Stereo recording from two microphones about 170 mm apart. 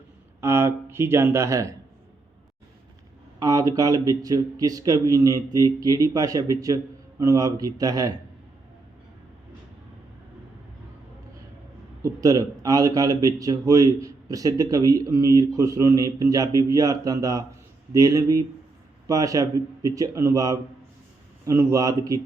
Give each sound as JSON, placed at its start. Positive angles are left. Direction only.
{"t": 0.4, "sound": "speech", "side_deg": -15}
{"t": 3.4, "sound": "a man's voice", "side_deg": -20}
{"t": 12.0, "sound": "a man's voice", "side_deg": -20}